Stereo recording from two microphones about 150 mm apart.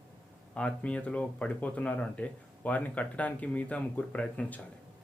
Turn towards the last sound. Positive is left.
turn(degrees=10)  # may be behind; listen again after turning